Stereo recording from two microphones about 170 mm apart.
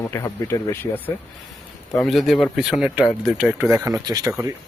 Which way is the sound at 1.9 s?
Centre (ahead or behind).